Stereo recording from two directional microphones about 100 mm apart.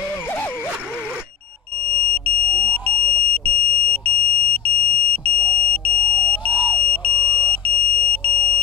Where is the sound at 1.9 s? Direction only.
15° left (ahead or behind).